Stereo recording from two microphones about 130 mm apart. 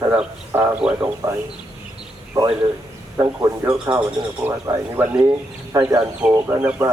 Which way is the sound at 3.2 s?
25° right (ahead or behind).